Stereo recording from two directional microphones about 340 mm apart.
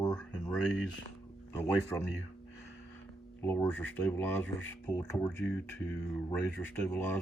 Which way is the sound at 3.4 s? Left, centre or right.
Centre.